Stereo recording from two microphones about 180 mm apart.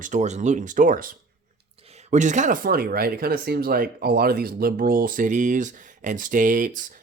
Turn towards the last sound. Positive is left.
turn(degrees=-50)  # may be behind; listen again after turning